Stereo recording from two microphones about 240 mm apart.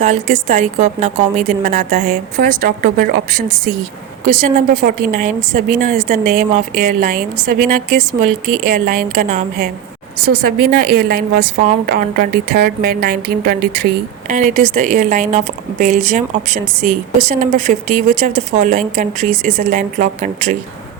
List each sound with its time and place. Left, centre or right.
0.0 s a woman's voice: right
4.7 s a woman's voice: right